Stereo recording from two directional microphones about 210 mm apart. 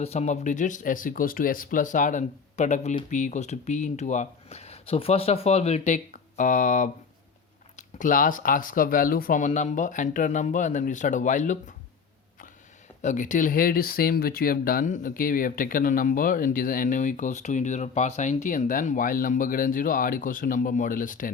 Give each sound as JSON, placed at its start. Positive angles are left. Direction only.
{"t": 0.0, "sound": "speech", "side_deg": 30}
{"t": 13.0, "sound": "speech", "side_deg": 35}